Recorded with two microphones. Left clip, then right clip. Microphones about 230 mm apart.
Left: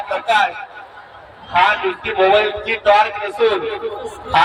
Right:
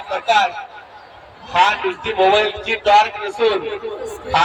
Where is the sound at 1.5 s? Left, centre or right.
Left.